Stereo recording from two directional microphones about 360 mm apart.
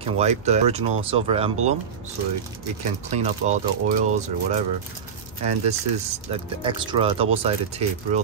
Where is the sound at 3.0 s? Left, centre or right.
Centre.